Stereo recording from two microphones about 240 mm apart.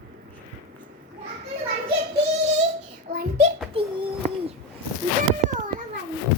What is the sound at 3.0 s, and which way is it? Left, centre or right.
Child singing, right.